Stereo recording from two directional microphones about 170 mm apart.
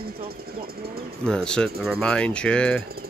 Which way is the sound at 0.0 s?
65° right (ahead or behind).